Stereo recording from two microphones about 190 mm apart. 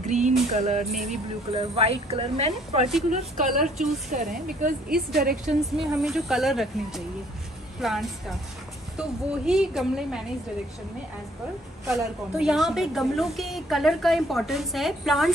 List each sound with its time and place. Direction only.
0.0 s music: 40° right (ahead or behind)
0.5 s speech: 40° right (ahead or behind)
0.9 s a woman's voice: centre (ahead or behind)
1.8 s speech: 30° right (ahead or behind)
3.6 s a woman's voice: centre (ahead or behind)
4.1 s a woman's voice: 45° right (ahead or behind)
5.8 s a woman's voice: centre (ahead or behind)
11.9 s a woman's voice: 5° right (ahead or behind)